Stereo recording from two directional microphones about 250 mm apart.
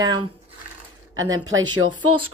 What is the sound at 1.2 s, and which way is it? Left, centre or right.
Speech, right.